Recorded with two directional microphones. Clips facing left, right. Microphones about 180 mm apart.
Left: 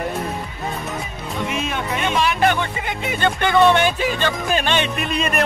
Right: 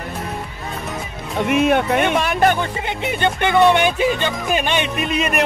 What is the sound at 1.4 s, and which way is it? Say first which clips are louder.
Speech: right 9 dB; 60° right (ahead or behind).